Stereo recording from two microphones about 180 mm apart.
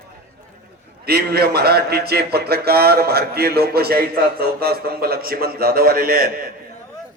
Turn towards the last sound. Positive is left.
turn(degrees=-55)  # may be behind; listen again after turning